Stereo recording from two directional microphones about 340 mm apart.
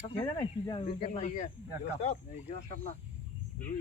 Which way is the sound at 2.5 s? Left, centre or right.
Left.